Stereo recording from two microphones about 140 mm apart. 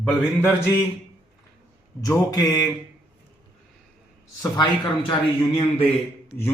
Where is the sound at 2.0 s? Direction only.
25° left (ahead or behind).